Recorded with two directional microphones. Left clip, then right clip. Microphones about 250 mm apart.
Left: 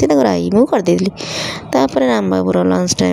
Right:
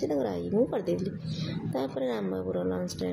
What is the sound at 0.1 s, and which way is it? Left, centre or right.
Speech, left.